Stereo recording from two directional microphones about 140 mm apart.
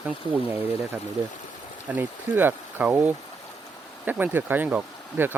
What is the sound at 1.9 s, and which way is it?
Speech, 15° right (ahead or behind).